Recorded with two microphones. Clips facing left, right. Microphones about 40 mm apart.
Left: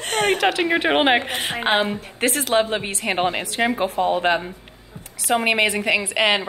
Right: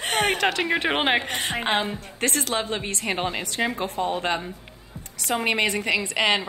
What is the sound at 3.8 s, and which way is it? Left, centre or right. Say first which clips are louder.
A woman's voice: left 6 dB; centre.